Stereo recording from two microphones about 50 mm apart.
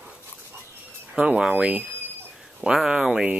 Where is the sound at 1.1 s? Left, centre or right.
Centre.